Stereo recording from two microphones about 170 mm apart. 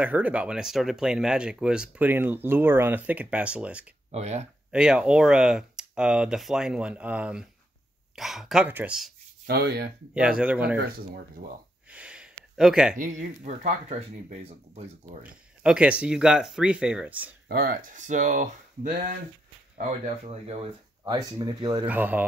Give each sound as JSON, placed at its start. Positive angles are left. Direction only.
{"t": 0.0, "sound": "speech", "side_deg": -10}
{"t": 4.1, "sound": "speech", "side_deg": -40}
{"t": 4.6, "sound": "speech", "side_deg": -5}
{"t": 9.5, "sound": "speech", "side_deg": -70}
{"t": 10.1, "sound": "speech", "side_deg": -5}
{"t": 10.8, "sound": "speech", "side_deg": -65}
{"t": 11.9, "sound": "gasp", "side_deg": -5}
{"t": 12.9, "sound": "speech", "side_deg": -50}
{"t": 15.2, "sound": "speech", "side_deg": -5}
{"t": 17.5, "sound": "speech", "side_deg": -60}
{"t": 20.2, "sound": "speech", "side_deg": -35}
{"t": 21.8, "sound": "speech", "side_deg": -10}